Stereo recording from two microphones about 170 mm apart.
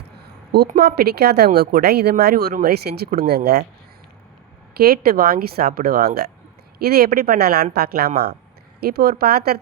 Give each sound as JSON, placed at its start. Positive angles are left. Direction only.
{"t": 0.2, "sound": "a sound", "side_deg": -70}
{"t": 0.8, "sound": "speech", "side_deg": -70}
{"t": 4.8, "sound": "a woman's voice", "side_deg": -65}